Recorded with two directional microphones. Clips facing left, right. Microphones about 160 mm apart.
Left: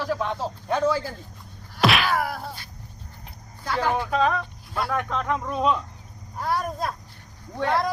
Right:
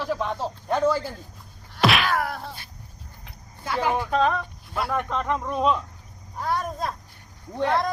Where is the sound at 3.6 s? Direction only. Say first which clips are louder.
Even; 10° right (ahead or behind).